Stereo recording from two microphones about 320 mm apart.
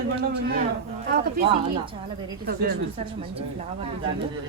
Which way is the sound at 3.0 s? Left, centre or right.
Centre.